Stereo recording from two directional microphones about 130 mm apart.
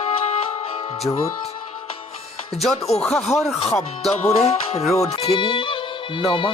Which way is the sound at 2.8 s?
50° left (ahead or behind).